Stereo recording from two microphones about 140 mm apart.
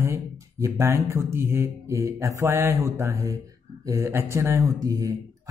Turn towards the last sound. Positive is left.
turn(degrees=-25)  # may be behind; listen again after turning